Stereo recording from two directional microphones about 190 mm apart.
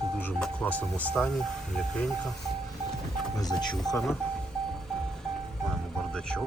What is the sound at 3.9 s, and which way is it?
Speech, centre (ahead or behind).